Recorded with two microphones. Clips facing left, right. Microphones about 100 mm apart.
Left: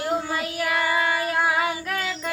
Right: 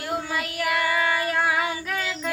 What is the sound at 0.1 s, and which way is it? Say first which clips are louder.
Child singing: right 1 dB; 25° left (ahead or behind).